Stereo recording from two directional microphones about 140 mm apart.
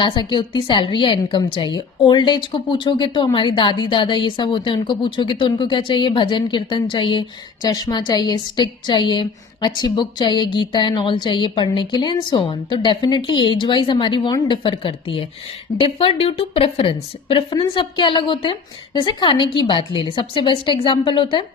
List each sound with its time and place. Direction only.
0.0 s a woman's voice: 35° left (ahead or behind)